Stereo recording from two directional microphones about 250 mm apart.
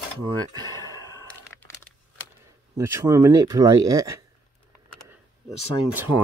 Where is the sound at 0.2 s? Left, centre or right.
Centre.